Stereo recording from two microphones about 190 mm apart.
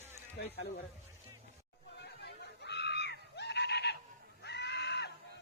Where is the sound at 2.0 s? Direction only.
60° left (ahead or behind).